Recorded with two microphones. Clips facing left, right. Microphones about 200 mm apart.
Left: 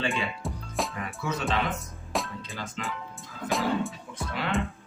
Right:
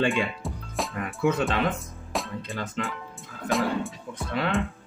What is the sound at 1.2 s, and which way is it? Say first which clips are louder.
Speech: right 7 dB; 55° right (ahead or behind).